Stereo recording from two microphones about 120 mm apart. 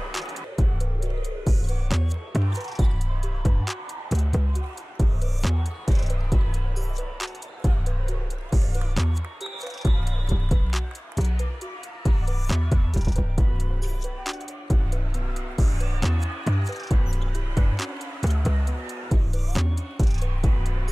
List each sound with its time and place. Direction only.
0.1 s music: centre (ahead or behind)
7.6 s music: centre (ahead or behind)
14.7 s music: centre (ahead or behind)